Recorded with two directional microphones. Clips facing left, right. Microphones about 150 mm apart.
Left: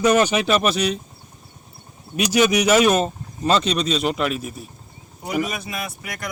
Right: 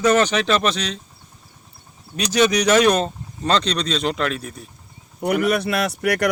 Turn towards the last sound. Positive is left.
turn(degrees=-75)  # may be behind; listen again after turning